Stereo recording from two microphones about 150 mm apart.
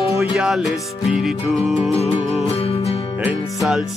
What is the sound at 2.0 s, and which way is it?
Music, 45° left (ahead or behind).